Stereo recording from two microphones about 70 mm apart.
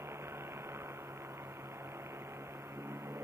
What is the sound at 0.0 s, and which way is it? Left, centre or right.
Vehicle, right.